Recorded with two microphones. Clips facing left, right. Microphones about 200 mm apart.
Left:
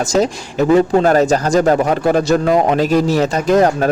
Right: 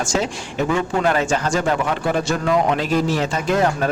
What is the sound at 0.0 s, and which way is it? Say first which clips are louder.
A man's voice: left 7 dB; 40° left (ahead or behind).